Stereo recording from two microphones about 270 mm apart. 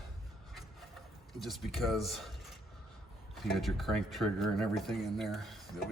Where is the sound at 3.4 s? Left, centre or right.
Centre.